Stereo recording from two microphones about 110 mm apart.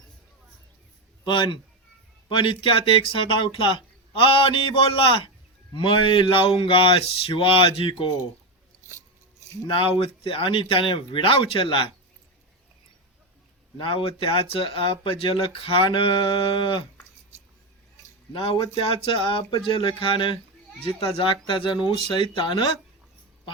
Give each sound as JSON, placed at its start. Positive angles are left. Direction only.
{"t": 1.2, "sound": "a man's voice", "side_deg": 45}
{"t": 9.6, "sound": "speech", "side_deg": 55}
{"t": 13.7, "sound": "speech", "side_deg": 55}
{"t": 18.3, "sound": "speech", "side_deg": 55}